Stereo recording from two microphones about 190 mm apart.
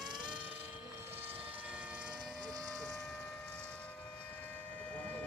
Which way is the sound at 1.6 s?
5° right (ahead or behind).